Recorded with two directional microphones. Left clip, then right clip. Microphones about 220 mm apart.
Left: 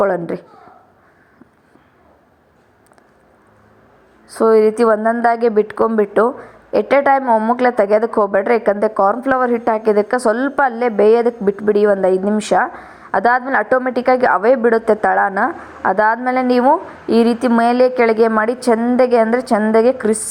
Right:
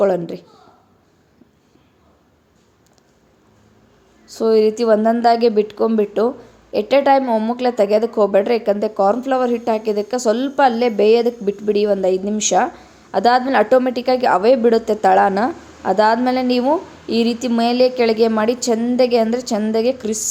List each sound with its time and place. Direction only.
0.0 s a woman's voice: centre (ahead or behind)
4.3 s a woman's voice: 5° left (ahead or behind)
17.1 s speech: 25° left (ahead or behind)
17.4 s a woman's voice: 5° left (ahead or behind)